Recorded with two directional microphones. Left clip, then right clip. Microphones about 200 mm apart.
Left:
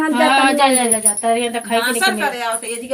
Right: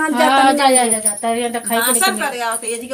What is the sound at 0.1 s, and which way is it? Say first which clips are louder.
Speech: right 1 dB; 25° left (ahead or behind).